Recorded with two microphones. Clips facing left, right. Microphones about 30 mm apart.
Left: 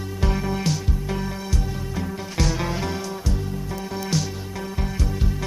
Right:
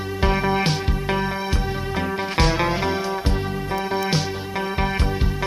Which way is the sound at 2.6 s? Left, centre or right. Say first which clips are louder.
Right 5 dB; right.